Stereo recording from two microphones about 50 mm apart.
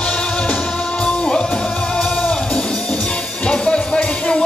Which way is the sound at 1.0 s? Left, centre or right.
Centre.